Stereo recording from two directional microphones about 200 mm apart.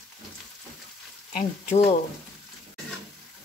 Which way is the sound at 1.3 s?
35° left (ahead or behind).